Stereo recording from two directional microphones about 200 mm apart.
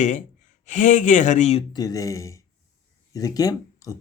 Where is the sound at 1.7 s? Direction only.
20° left (ahead or behind).